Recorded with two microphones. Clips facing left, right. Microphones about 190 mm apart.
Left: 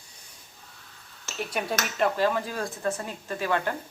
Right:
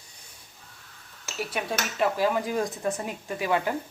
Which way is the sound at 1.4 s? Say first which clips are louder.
Left 1 dB; 5° right (ahead or behind).